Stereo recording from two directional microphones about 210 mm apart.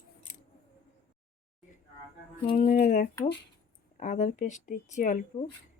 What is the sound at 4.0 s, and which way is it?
Speech, 35° left (ahead or behind).